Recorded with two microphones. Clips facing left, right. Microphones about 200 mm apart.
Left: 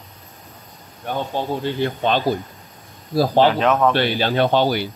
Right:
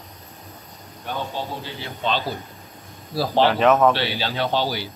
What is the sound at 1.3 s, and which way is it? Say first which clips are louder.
Speech: left 7 dB; 55° left (ahead or behind).